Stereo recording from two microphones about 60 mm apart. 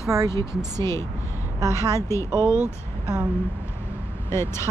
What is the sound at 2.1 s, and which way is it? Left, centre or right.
Speech, left.